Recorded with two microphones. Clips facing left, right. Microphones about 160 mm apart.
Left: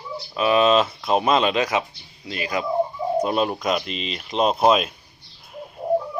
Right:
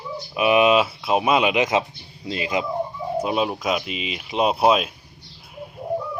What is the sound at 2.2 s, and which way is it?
Speech, 25° right (ahead or behind).